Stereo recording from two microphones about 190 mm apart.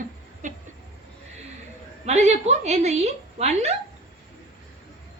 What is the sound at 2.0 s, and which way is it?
A woman's voice, 35° right (ahead or behind).